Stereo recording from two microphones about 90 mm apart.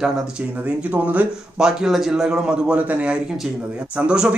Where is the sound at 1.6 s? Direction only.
5° right (ahead or behind).